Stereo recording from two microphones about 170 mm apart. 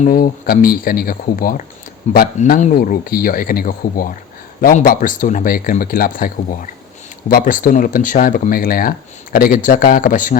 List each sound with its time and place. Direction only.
0.0 s speech: 55° left (ahead or behind)
2.0 s speech: 40° left (ahead or behind)
2.7 s speech: 60° left (ahead or behind)